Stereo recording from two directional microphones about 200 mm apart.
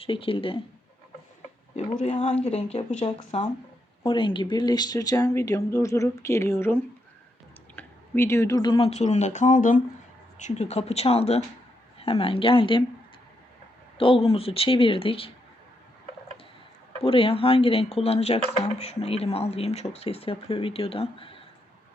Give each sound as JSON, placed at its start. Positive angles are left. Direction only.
{"t": 0.0, "sound": "speech", "side_deg": 25}
{"t": 1.7, "sound": "speech", "side_deg": 35}
{"t": 14.0, "sound": "speech", "side_deg": 30}
{"t": 17.0, "sound": "speech", "side_deg": 30}